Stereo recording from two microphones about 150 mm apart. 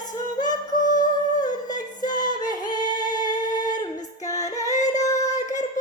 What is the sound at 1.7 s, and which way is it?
Music, 25° left (ahead or behind).